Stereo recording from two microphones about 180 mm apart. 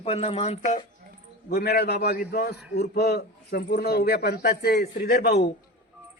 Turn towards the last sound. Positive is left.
turn(degrees=60)  # may be behind; listen again after turning